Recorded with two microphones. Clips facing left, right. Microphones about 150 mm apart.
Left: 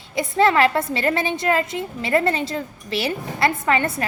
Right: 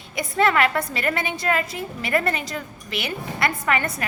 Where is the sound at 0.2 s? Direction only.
25° left (ahead or behind).